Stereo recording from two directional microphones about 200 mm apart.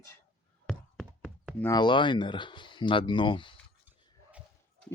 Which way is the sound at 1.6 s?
20° left (ahead or behind).